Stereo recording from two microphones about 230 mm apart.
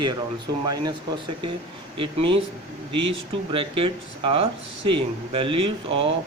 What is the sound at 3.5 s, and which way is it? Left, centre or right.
Speech, right.